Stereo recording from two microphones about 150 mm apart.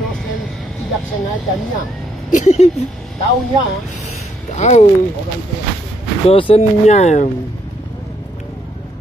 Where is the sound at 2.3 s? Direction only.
50° left (ahead or behind).